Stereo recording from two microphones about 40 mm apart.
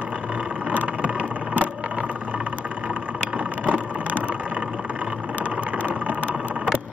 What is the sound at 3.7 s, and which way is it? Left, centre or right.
Vehicle, right.